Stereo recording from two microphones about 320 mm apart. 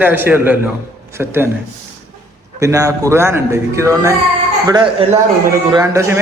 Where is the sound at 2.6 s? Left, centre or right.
Centre.